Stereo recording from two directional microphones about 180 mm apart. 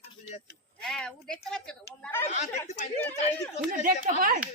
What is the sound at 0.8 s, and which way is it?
A woman's voice, 5° left (ahead or behind).